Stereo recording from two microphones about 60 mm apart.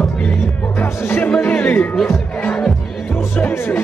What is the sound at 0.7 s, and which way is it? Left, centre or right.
Music, left.